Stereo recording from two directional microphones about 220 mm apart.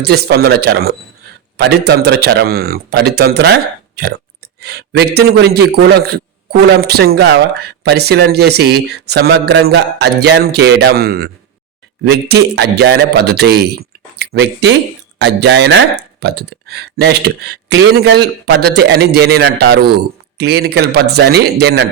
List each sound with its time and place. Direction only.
0.0 s speech: 45° right (ahead or behind)